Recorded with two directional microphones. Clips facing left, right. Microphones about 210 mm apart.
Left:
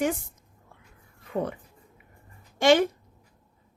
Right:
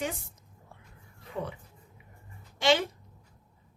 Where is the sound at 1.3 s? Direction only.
55° left (ahead or behind).